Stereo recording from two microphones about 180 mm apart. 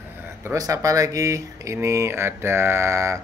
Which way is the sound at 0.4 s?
15° right (ahead or behind).